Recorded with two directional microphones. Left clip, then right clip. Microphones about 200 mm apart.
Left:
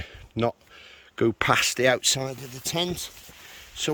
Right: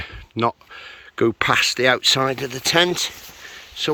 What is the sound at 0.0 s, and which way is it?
Speech, 10° left (ahead or behind).